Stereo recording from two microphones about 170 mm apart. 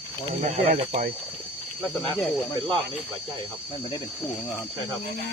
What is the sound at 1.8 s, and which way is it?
Speech, centre (ahead or behind).